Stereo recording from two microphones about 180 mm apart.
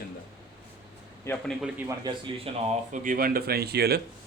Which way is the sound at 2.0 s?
30° right (ahead or behind).